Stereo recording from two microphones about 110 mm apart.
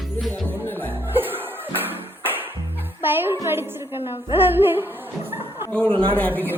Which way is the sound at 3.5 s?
20° right (ahead or behind).